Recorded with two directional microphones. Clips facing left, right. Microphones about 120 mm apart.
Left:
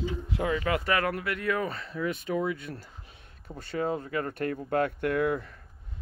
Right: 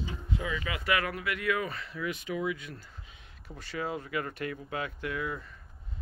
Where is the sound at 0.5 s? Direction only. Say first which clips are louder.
Left 3 dB; 50° left (ahead or behind).